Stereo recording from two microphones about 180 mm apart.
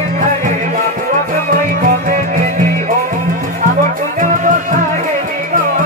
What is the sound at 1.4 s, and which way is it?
Music, 50° right (ahead or behind).